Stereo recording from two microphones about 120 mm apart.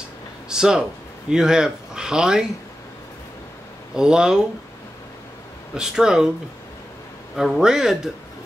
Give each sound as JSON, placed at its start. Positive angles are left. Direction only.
{"t": 0.5, "sound": "a man's voice", "side_deg": -5}
{"t": 3.9, "sound": "a man's voice", "side_deg": -5}
{"t": 5.8, "sound": "a man's voice", "side_deg": -5}
{"t": 7.3, "sound": "a man's voice", "side_deg": -5}